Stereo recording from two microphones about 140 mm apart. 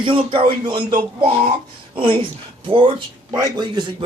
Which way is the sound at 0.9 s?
65° right (ahead or behind).